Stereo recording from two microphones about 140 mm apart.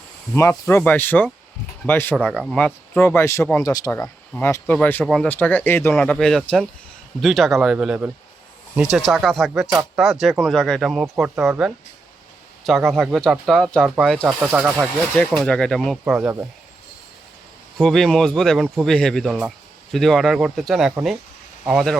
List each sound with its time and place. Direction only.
0.3 s speech: 20° left (ahead or behind)
4.0 s speech: 15° left (ahead or behind); by 14.6 s centre (ahead or behind)
14.6 s speech: 15° right (ahead or behind)
15.1 s speech: 5° left (ahead or behind)
17.7 s speech: centre (ahead or behind)